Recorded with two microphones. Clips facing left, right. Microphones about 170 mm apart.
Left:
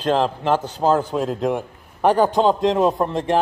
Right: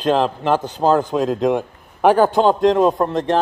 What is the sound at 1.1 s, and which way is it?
Speech, 90° right.